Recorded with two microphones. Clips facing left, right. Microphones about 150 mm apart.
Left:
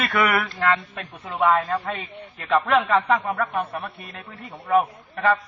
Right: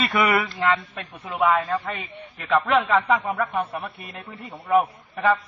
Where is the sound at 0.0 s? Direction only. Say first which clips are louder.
Right 1 dB; 15° right (ahead or behind).